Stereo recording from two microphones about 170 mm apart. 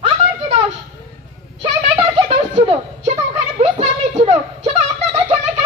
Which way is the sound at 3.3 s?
40° right (ahead or behind).